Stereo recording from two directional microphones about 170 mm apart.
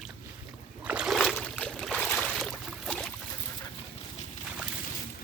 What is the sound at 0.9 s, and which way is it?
Boat, 5° right (ahead or behind).